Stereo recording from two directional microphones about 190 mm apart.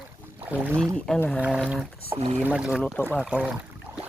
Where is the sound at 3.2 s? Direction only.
5° right (ahead or behind).